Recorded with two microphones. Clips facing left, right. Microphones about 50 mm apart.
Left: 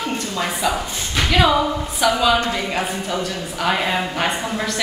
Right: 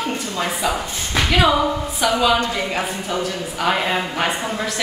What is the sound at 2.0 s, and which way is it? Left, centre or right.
A woman's voice, centre.